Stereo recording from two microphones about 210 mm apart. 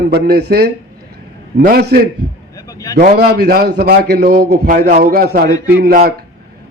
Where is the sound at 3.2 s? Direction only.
50° right (ahead or behind).